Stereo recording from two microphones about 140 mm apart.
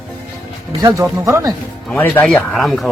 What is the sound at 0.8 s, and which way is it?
Speech, 20° right (ahead or behind).